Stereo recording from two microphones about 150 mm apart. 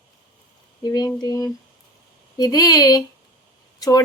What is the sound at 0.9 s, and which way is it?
A woman's voice, 25° left (ahead or behind).